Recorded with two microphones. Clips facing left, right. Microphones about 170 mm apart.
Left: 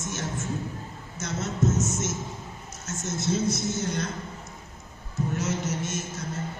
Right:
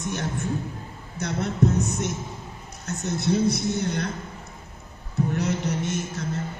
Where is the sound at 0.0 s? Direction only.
60° right (ahead or behind).